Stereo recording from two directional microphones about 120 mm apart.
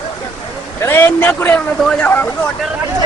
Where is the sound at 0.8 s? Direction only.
20° left (ahead or behind).